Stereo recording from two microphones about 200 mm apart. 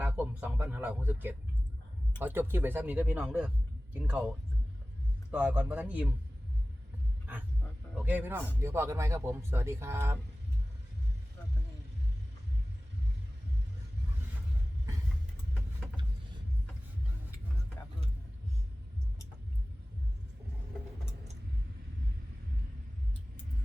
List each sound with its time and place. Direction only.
0.0 s speech: 10° right (ahead or behind)
5.3 s speech: 5° right (ahead or behind)
7.9 s speech: 10° right (ahead or behind)
17.8 s a sound: 15° left (ahead or behind)